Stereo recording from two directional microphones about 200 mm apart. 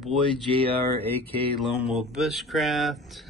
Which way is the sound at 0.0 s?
Centre (ahead or behind).